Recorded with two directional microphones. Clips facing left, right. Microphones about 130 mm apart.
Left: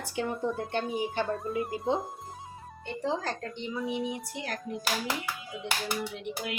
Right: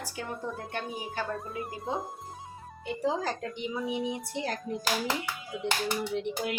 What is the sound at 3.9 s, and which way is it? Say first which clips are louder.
Speech: right 1 dB; 20° right (ahead or behind).